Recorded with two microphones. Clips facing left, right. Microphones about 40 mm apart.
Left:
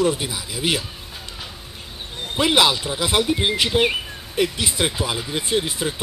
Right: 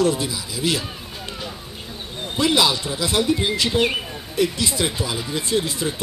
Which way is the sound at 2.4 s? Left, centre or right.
Left.